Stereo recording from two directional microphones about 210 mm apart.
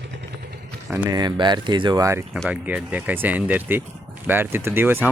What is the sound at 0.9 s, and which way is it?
Speech, 10° right (ahead or behind).